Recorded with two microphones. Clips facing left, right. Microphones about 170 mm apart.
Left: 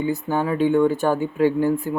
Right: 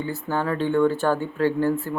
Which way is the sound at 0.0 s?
15° left (ahead or behind).